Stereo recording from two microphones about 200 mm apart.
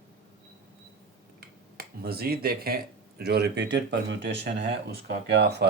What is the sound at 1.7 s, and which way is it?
Speech, 50° right (ahead or behind).